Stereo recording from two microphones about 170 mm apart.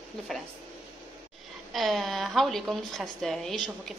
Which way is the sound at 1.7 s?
Centre (ahead or behind).